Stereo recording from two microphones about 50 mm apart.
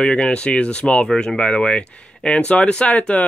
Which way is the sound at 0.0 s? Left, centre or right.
Centre.